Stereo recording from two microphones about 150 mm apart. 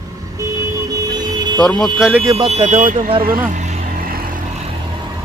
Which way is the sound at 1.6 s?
5° left (ahead or behind).